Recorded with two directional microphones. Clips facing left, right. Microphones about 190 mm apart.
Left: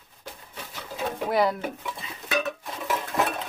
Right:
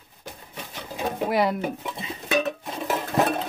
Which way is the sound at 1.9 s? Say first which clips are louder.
Right 4 dB; 25° right (ahead or behind).